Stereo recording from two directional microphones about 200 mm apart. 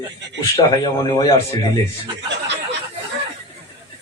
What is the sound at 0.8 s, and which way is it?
Speech, 15° left (ahead or behind).